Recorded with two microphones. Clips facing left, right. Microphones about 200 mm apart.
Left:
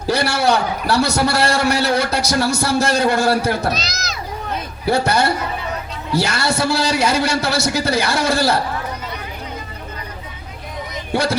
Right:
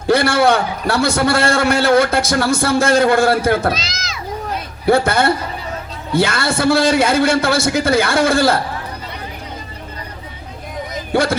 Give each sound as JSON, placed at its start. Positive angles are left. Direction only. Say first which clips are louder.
{"t": 0.1, "sound": "a man's voice", "louder": "right 4 dB", "side_deg": -55}
{"t": 3.7, "sound": "speech", "louder": "right 2 dB", "side_deg": 40}
{"t": 4.9, "sound": "a man's voice", "louder": "right 3 dB", "side_deg": -55}
{"t": 11.1, "sound": "speech", "louder": "right 3 dB", "side_deg": -55}